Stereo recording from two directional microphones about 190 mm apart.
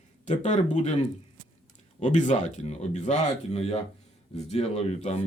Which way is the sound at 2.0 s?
40° left (ahead or behind).